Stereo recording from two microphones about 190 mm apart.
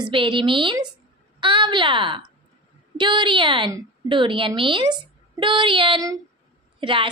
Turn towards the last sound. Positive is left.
turn(degrees=-25)  # may be behind; listen again after turning